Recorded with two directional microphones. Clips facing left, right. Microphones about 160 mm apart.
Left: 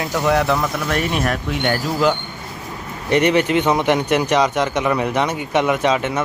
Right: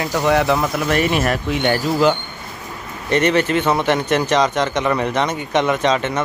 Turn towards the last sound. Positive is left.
turn(degrees=10)  # may be behind; listen again after turning